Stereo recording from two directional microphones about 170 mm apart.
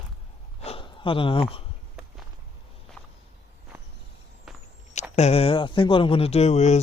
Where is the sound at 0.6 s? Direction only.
35° left (ahead or behind).